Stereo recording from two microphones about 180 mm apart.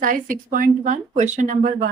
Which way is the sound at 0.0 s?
50° right (ahead or behind).